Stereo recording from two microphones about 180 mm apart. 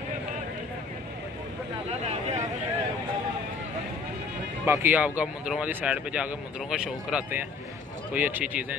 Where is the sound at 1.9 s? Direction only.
35° right (ahead or behind).